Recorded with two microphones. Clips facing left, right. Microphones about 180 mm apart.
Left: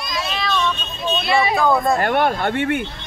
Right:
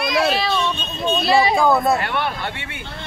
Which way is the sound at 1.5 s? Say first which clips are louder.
Right 1 dB; 10° right (ahead or behind).